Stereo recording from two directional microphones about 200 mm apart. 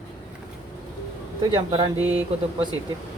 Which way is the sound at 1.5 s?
25° right (ahead or behind).